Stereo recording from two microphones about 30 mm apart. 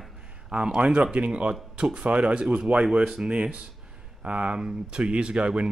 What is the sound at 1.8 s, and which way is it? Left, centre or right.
Speech, right.